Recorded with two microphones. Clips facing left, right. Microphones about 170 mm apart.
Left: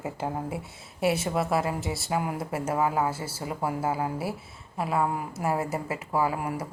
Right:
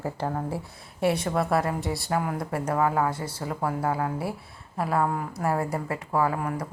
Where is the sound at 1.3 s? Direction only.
Centre (ahead or behind).